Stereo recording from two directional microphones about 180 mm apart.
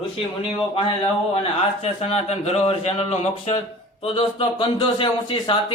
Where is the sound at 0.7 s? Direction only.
30° left (ahead or behind).